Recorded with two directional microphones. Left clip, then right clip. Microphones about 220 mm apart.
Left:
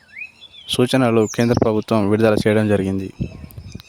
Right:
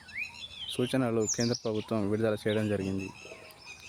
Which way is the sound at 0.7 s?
45° left (ahead or behind).